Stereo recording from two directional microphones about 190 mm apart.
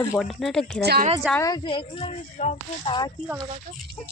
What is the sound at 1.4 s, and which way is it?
Speech, 20° left (ahead or behind).